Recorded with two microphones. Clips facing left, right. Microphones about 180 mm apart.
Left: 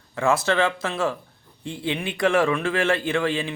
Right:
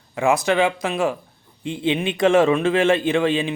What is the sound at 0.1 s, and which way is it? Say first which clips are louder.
A man's voice: right 3 dB; 15° right (ahead or behind).